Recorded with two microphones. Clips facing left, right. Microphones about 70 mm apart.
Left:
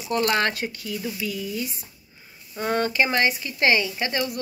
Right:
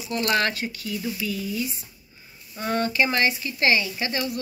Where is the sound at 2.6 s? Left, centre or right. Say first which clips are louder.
Left 1 dB; left.